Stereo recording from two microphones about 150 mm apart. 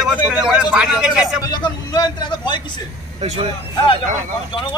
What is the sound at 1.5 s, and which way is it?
A man's voice, 25° left (ahead or behind).